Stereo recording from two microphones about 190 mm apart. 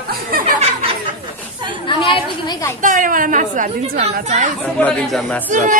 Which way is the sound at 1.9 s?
25° left (ahead or behind).